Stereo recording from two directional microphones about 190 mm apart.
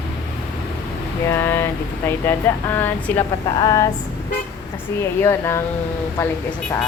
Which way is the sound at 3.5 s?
20° left (ahead or behind).